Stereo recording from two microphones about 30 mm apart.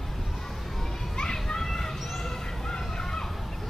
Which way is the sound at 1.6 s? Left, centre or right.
Centre.